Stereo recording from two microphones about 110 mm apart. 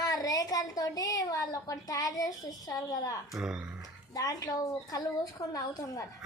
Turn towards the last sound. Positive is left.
turn(degrees=35)  # may be behind; listen again after turning